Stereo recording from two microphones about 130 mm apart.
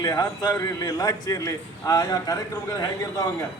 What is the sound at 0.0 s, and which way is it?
A man's voice, 30° left (ahead or behind).